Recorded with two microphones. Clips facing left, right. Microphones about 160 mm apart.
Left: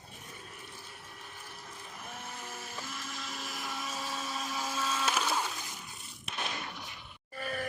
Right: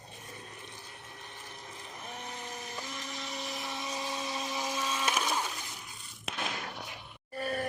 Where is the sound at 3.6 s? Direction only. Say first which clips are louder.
Left 1 dB; 20° right (ahead or behind).